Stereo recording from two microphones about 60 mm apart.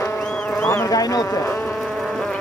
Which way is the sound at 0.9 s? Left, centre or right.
Left.